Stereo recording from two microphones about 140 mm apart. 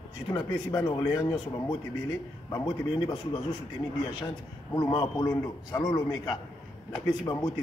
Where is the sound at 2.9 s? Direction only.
35° left (ahead or behind).